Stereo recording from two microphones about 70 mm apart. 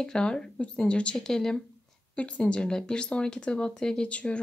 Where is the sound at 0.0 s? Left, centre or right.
Centre.